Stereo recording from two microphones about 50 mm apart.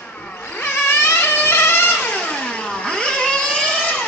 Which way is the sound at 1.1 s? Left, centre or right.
Left.